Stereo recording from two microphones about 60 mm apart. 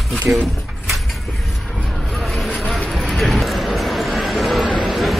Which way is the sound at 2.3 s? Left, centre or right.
Centre.